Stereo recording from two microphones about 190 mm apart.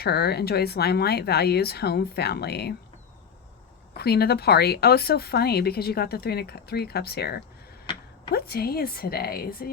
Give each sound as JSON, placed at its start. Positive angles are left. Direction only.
{"t": 0.0, "sound": "a woman's voice", "side_deg": 55}
{"t": 3.9, "sound": "a woman's voice", "side_deg": 55}